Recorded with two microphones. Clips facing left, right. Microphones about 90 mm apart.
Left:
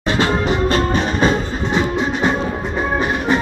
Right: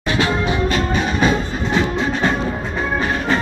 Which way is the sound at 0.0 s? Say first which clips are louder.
Left 1 dB; 35° left (ahead or behind).